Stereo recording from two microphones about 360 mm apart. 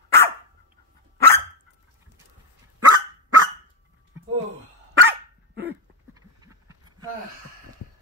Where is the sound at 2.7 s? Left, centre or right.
Right.